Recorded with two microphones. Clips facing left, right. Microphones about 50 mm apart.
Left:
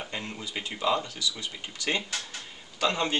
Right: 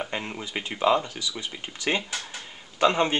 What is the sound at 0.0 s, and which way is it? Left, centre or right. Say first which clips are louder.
Speech: right 4 dB; right.